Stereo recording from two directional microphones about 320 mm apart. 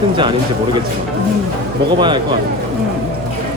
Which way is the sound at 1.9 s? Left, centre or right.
Centre.